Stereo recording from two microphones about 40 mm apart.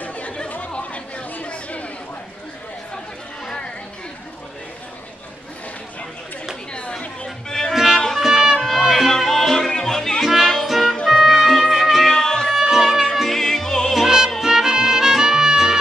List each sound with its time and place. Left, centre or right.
0.0 s chatter: left
6.7 s chatter: left
7.2 s music: centre
7.7 s music: centre
8.5 s music: centre
12.1 s music: centre
12.5 s music: centre
13.3 s music: centre
13.9 s music: centre